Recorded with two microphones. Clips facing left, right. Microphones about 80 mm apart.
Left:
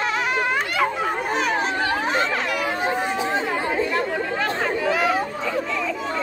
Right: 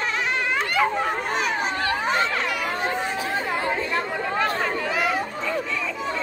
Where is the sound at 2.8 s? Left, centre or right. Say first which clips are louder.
Left 3 dB; centre.